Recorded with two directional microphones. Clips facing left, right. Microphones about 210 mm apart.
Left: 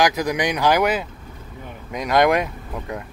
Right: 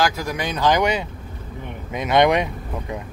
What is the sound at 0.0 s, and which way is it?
Speech, 20° left (ahead or behind).